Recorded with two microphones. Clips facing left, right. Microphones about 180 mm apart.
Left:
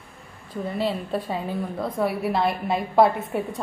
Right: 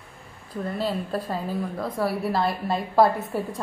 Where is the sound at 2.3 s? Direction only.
20° left (ahead or behind).